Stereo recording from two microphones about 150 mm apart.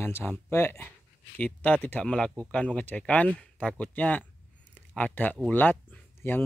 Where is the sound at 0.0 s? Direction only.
15° left (ahead or behind).